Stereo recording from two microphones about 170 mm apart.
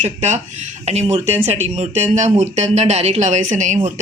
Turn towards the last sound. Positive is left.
turn(degrees=-45)  # may be behind; listen again after turning